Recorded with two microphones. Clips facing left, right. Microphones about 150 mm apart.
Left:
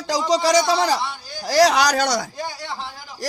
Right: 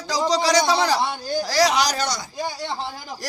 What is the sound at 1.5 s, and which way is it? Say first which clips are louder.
Speech: left 5 dB; 65° left (ahead or behind).